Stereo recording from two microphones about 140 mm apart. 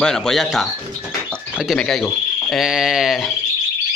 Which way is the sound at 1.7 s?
5° left (ahead or behind).